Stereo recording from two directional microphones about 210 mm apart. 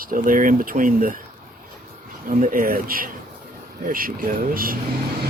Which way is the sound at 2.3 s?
40° right (ahead or behind).